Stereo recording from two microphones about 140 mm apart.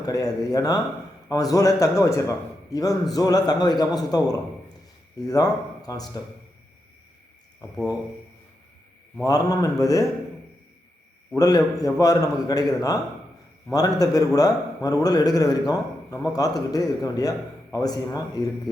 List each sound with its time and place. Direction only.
0.0 s a man's voice: 25° left (ahead or behind)
9.2 s a man's voice: 25° left (ahead or behind)
11.3 s a man's voice: 25° left (ahead or behind)